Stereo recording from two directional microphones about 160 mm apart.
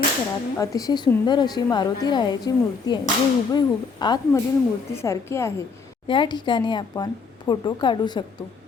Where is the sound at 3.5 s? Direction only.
25° left (ahead or behind).